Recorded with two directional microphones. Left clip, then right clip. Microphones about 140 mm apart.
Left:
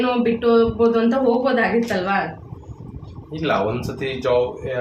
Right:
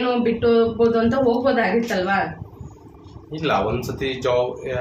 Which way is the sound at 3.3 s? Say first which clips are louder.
Even; 20° right (ahead or behind).